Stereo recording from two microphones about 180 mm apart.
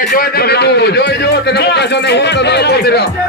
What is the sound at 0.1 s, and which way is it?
A man's voice, 55° left (ahead or behind).